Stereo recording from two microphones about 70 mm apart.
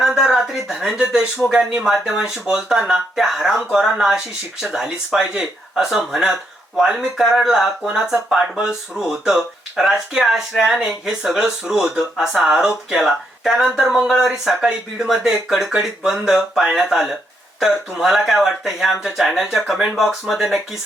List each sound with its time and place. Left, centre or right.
0.0 s speech: centre